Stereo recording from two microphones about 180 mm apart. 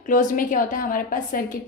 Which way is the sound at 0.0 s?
45° left (ahead or behind).